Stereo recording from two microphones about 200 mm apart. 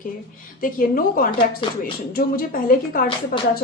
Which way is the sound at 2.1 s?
45° left (ahead or behind).